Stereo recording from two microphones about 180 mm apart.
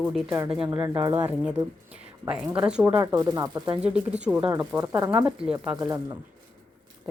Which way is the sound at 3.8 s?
5° right (ahead or behind).